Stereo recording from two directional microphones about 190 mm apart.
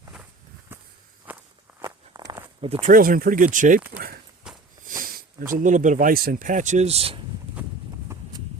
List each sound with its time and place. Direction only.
0.7 s walk: 10° right (ahead or behind)
1.8 s walk: 20° right (ahead or behind)
2.8 s speech: 45° right (ahead or behind)
4.4 s walk: 5° right (ahead or behind)
4.8 s a sound: 45° right (ahead or behind)
5.5 s speech: 45° right (ahead or behind)
7.9 s a sound: 25° right (ahead or behind)